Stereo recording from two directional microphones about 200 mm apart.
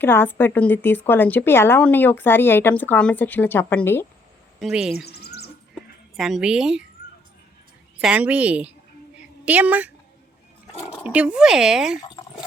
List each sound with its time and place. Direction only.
0.0 s a woman's voice: 10° left (ahead or behind)
4.6 s speech: centre (ahead or behind)
5.0 s a sound: 55° left (ahead or behind)
6.1 s speech: centre (ahead or behind)
8.0 s a woman's voice: 5° right (ahead or behind)
11.0 s speech: 5° right (ahead or behind)